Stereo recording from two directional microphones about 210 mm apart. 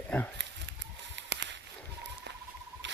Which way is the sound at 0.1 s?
5° left (ahead or behind).